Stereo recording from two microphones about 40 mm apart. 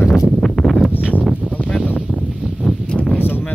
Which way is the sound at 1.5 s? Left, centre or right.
Left.